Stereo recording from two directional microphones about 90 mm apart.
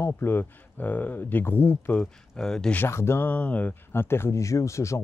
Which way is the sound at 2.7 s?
25° left (ahead or behind).